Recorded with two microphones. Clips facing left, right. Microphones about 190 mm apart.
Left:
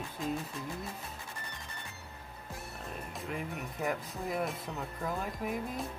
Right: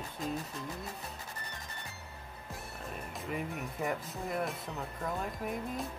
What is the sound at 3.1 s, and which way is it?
Speech, centre (ahead or behind).